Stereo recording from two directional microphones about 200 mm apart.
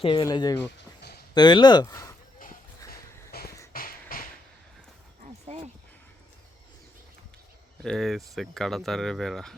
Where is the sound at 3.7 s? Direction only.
45° left (ahead or behind).